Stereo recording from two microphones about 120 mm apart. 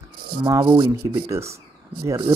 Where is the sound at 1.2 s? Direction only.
25° right (ahead or behind).